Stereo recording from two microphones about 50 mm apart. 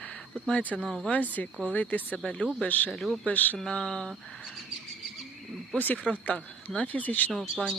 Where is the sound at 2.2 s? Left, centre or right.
Centre.